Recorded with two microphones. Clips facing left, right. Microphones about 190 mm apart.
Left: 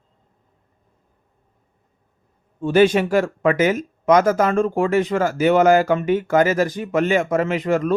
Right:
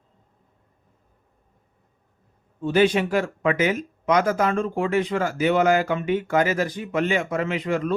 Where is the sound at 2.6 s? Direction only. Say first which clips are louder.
Left 4 dB; 45° left (ahead or behind).